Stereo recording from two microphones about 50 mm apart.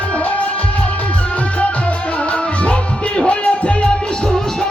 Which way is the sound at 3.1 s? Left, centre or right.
Left.